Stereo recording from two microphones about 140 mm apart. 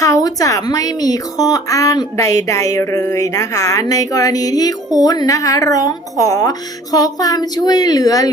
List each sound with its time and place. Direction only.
0.0 s a woman's voice: 25° left (ahead or behind)